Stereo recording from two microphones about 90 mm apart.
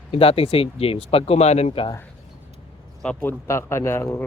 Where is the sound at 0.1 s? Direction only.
90° left.